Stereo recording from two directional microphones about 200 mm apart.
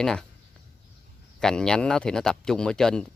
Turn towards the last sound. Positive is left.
turn(degrees=5)  # may be behind; listen again after turning